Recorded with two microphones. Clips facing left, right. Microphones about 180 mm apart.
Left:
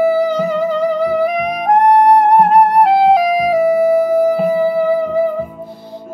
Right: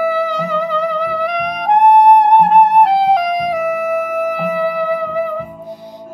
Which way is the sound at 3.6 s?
30° left (ahead or behind).